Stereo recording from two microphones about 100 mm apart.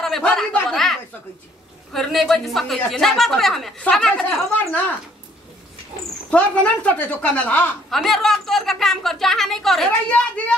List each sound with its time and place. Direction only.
0.0 s a woman's voice: 5° left (ahead or behind)
4.2 s a woman's voice: 10° left (ahead or behind)
6.3 s a woman's voice: 10° left (ahead or behind)
7.9 s a woman's voice: centre (ahead or behind)
10.0 s a woman's voice: 15° left (ahead or behind)